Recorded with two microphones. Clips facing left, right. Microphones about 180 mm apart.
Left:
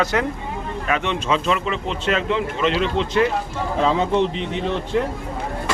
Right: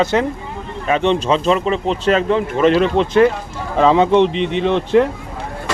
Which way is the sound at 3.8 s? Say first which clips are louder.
Right 7 dB; 70° right (ahead or behind).